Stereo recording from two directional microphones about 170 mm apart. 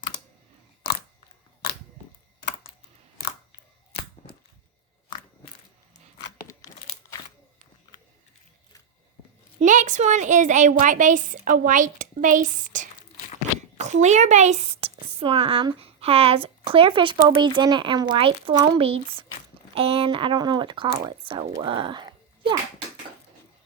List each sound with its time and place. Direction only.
9.6 s a woman's voice: 45° right (ahead or behind); by 22.5 s 25° right (ahead or behind)